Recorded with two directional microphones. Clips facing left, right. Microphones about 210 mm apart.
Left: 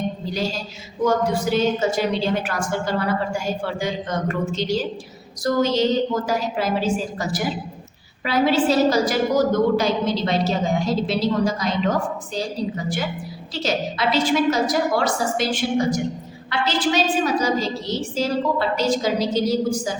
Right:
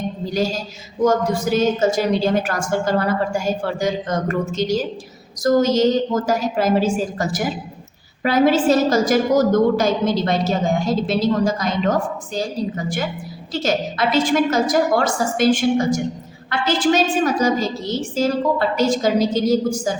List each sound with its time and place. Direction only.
1.0 s a woman's voice: 45° right (ahead or behind)
16.5 s a woman's voice: 50° right (ahead or behind)
18.8 s a woman's voice: 50° right (ahead or behind)